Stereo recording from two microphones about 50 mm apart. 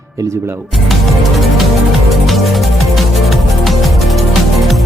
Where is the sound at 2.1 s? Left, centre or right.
Centre.